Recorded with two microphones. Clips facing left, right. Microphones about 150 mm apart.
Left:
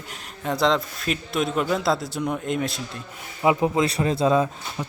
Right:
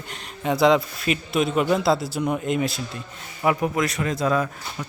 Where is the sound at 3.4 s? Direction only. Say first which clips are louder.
Left 2 dB; 20° left (ahead or behind).